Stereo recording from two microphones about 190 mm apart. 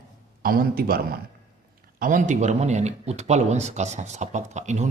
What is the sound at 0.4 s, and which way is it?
Speech, 50° right (ahead or behind).